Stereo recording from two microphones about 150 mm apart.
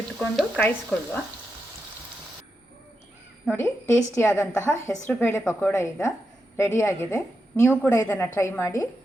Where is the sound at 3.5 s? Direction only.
15° left (ahead or behind).